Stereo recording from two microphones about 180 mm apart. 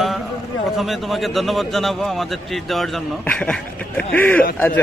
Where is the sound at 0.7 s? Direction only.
Centre (ahead or behind).